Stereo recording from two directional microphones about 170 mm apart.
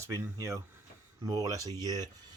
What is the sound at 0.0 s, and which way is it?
Speech, 15° right (ahead or behind).